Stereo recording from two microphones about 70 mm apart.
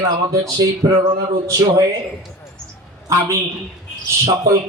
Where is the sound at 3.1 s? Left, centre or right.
Right.